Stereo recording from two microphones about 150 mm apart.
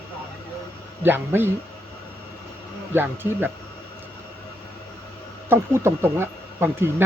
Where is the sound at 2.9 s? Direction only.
15° right (ahead or behind).